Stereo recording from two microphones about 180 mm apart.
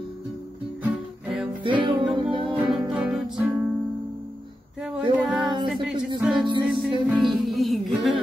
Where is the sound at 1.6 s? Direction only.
25° right (ahead or behind).